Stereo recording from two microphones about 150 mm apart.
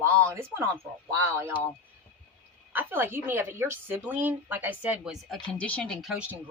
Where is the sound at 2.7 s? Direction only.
10° right (ahead or behind).